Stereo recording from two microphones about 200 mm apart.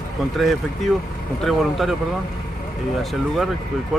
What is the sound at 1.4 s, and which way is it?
Speech, centre (ahead or behind).